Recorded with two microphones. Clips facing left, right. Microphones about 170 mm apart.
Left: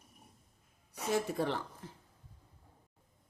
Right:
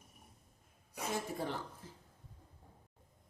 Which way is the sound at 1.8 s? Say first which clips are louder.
Left 4 dB; 70° left (ahead or behind).